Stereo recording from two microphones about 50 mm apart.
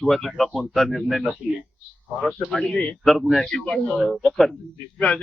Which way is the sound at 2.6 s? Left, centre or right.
Centre.